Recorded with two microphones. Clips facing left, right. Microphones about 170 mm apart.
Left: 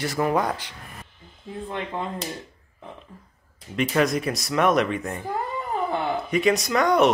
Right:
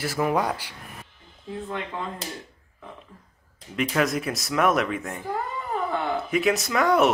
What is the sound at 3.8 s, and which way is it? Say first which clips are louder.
Speech: left 2 dB; centre (ahead or behind).